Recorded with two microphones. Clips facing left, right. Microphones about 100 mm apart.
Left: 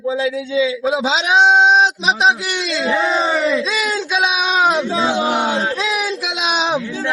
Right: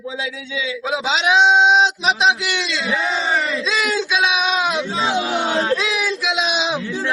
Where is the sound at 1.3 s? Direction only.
45° left (ahead or behind).